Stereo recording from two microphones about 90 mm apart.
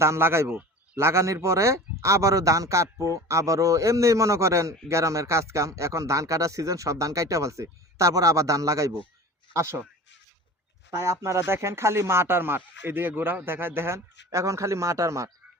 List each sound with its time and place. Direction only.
0.0 s speech: 30° right (ahead or behind)
10.9 s speech: 30° right (ahead or behind)